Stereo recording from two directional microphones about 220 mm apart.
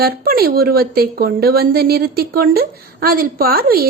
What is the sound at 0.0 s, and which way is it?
A woman's voice, 40° right (ahead or behind).